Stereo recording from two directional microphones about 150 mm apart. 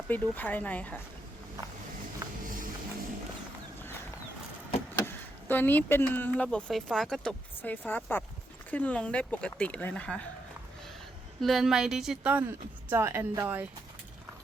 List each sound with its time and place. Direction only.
0.1 s speech: 10° left (ahead or behind)
2.2 s music: 25° right (ahead or behind)
4.9 s speech: 15° left (ahead or behind)
11.3 s speech: centre (ahead or behind); by 13.7 s 15° right (ahead or behind)